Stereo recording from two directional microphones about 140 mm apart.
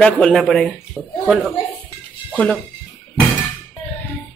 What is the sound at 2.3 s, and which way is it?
Speech, 10° left (ahead or behind).